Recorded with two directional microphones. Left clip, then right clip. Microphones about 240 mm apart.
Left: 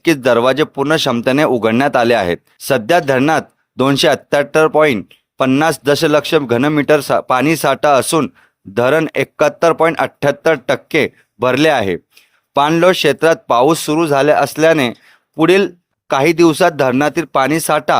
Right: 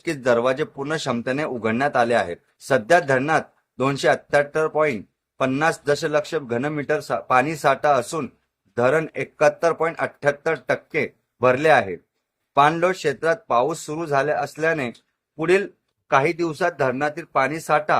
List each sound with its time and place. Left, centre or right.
0.0 s speech: left